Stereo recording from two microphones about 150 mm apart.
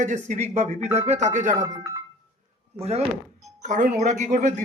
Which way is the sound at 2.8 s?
45° right (ahead or behind).